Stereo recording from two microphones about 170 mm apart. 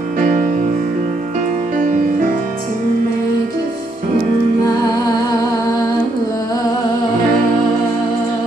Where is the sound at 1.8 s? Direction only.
50° right (ahead or behind).